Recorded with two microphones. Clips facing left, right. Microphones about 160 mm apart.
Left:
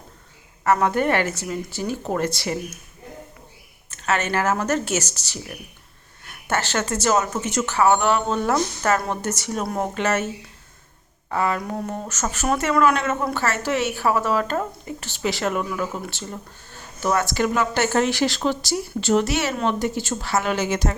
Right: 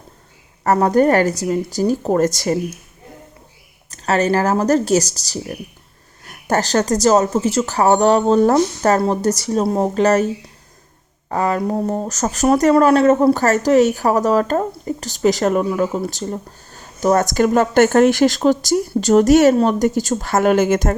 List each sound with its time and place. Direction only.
0.6 s speech: 40° right (ahead or behind)
3.8 s speech: 35° right (ahead or behind)
11.3 s speech: 40° right (ahead or behind)